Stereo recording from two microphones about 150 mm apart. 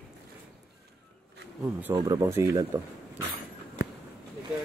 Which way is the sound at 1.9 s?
25° right (ahead or behind).